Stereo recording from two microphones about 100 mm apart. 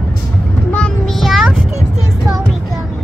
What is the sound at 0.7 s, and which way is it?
Child singing, 5° left (ahead or behind).